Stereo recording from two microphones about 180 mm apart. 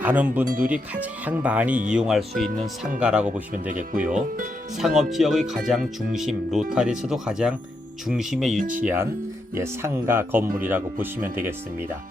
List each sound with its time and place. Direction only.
0.0 s speech: 10° right (ahead or behind)
3.7 s speech: 50° right (ahead or behind)
4.8 s speech: centre (ahead or behind)